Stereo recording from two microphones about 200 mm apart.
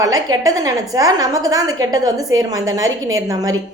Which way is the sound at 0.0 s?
20° right (ahead or behind).